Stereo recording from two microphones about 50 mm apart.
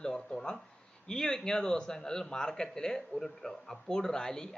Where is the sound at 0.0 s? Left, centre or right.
Centre.